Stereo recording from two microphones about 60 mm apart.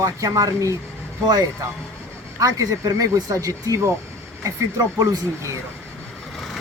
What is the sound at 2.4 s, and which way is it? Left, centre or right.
Speech, right.